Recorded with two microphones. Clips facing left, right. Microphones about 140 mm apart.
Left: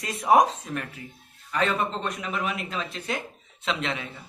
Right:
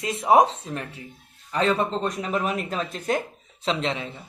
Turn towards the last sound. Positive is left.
turn(degrees=-30)  # may be behind; listen again after turning